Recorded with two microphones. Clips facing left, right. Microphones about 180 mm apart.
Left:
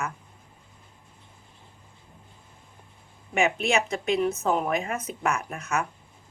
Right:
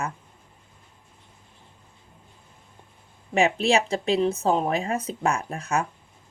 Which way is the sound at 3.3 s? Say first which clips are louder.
Right 3 dB; 35° right (ahead or behind).